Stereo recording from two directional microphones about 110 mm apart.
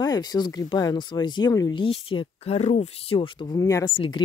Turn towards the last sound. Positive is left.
turn(degrees=50)  # may be behind; listen again after turning